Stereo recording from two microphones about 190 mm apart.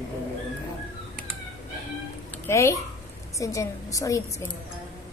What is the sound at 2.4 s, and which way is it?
A woman's voice, 15° left (ahead or behind).